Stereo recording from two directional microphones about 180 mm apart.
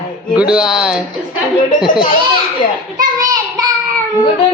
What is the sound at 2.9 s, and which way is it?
Child singing, 20° right (ahead or behind).